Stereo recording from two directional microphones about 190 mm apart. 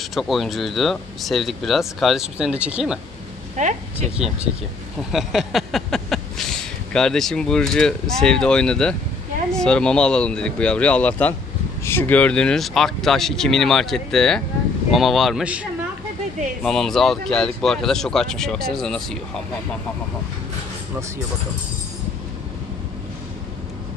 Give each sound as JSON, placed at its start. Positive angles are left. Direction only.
{"t": 0.1, "sound": "speech", "side_deg": 0}
{"t": 3.5, "sound": "a woman's voice", "side_deg": -40}
{"t": 5.1, "sound": "speech", "side_deg": 0}
{"t": 16.6, "sound": "speech", "side_deg": 0}